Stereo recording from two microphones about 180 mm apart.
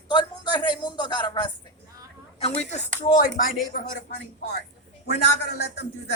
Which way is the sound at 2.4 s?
35° left (ahead or behind).